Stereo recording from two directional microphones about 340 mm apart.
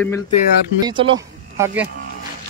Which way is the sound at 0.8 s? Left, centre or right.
Centre.